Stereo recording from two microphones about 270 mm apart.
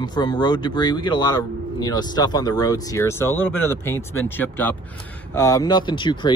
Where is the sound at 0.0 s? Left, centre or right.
Centre.